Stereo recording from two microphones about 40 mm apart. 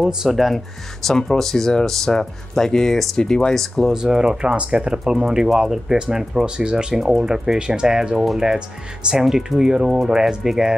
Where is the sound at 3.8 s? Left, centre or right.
Centre.